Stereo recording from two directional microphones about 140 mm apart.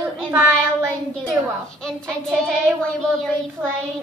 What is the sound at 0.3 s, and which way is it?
Child singing, 15° right (ahead or behind).